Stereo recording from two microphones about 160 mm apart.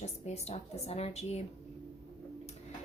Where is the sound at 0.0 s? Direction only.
45° left (ahead or behind).